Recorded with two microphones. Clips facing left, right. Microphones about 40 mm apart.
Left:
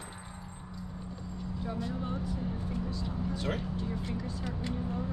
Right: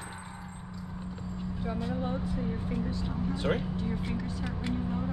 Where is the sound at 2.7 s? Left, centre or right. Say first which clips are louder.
Right 3 dB; right.